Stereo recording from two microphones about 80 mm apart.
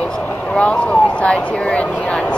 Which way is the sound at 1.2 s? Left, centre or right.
Centre.